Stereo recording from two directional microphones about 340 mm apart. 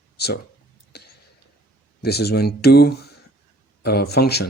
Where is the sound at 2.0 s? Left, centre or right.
Left.